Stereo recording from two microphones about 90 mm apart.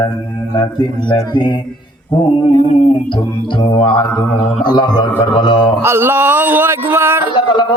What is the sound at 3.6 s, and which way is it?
Mantra, 70° left (ahead or behind).